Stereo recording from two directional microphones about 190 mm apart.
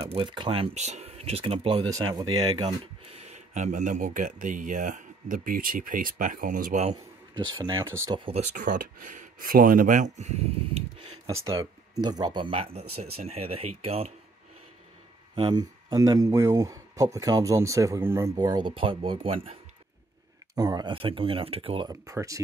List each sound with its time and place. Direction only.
0.1 s speech: 30° right (ahead or behind)
7.3 s speech: 20° right (ahead or behind)
8.5 s speech: 45° right (ahead or behind)
11.5 s speech: 20° right (ahead or behind)
15.3 s speech: 20° right (ahead or behind)
20.5 s speech: 20° right (ahead or behind)